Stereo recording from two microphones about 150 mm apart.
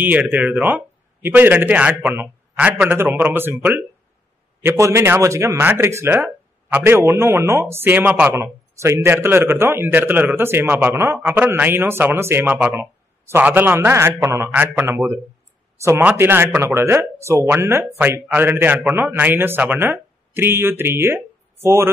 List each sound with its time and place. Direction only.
0.0 s speech: 10° right (ahead or behind)